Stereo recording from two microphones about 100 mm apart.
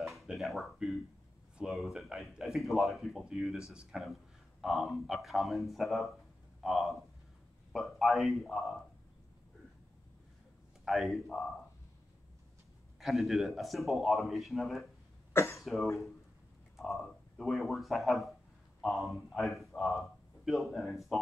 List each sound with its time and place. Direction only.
0.0 s a sound: centre (ahead or behind)
1.6 s a man's voice: centre (ahead or behind)
10.9 s a man's voice: centre (ahead or behind)
13.0 s a man's voice: centre (ahead or behind)
15.3 s cough: 25° left (ahead or behind)
15.6 s a man's voice: centre (ahead or behind)